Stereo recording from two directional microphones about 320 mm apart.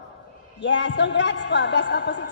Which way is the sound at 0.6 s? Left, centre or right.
Left.